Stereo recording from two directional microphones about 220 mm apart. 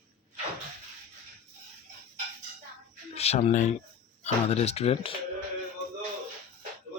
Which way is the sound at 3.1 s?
30° left (ahead or behind).